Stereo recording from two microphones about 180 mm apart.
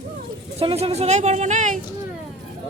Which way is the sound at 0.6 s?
30° right (ahead or behind).